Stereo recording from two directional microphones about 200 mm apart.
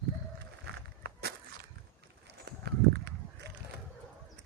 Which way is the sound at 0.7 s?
55° right (ahead or behind).